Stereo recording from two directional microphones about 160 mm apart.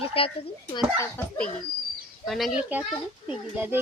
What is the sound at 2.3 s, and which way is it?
Speech, centre (ahead or behind).